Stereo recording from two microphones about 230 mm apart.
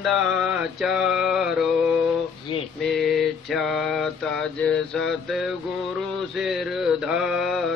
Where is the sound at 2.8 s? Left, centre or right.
Centre.